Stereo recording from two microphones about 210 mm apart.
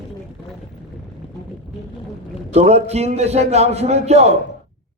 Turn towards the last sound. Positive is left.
turn(degrees=-30)  # may be behind; listen again after turning